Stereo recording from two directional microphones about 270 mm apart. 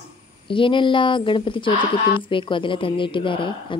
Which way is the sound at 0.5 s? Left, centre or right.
Centre.